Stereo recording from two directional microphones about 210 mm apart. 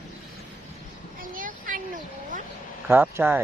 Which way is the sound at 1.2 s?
40° right (ahead or behind).